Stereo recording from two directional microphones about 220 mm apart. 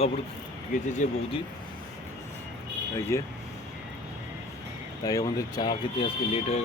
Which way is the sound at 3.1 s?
15° left (ahead or behind).